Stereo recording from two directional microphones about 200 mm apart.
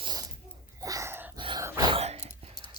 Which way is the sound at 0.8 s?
15° right (ahead or behind).